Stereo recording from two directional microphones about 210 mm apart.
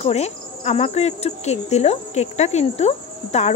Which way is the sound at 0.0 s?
30° left (ahead or behind).